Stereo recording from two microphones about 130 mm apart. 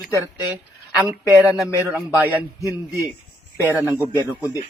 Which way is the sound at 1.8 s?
15° right (ahead or behind).